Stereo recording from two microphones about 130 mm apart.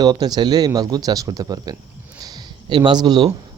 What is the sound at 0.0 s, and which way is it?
A man's voice, 30° right (ahead or behind).